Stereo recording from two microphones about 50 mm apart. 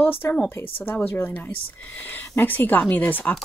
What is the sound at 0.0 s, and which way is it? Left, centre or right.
Speech, left.